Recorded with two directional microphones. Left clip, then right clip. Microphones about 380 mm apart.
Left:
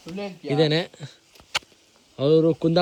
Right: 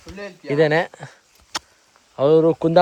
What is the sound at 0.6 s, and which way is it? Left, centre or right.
Speech, right.